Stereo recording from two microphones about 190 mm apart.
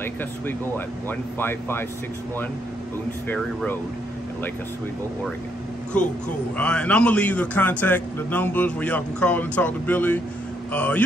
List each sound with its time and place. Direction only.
0.0 s a man's voice: 10° left (ahead or behind)
5.9 s a man's voice: 5° left (ahead or behind)